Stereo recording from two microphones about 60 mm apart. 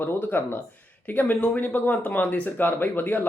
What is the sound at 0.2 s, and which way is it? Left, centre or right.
Speech, left.